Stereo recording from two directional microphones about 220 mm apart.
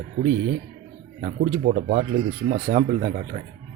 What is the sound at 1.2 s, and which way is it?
Speech, 35° right (ahead or behind).